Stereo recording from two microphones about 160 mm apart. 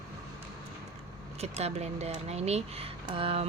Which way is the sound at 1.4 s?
40° right (ahead or behind).